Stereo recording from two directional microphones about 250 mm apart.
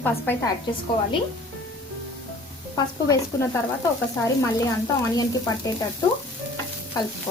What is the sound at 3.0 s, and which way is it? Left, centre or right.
A woman's voice, centre.